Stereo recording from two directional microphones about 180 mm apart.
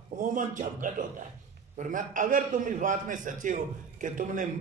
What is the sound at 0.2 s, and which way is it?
A man's voice, 45° right (ahead or behind).